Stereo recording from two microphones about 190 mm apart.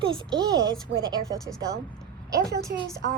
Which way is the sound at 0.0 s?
20° right (ahead or behind).